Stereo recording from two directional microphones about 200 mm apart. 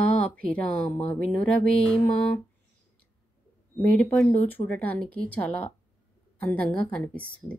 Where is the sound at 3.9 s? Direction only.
5° left (ahead or behind).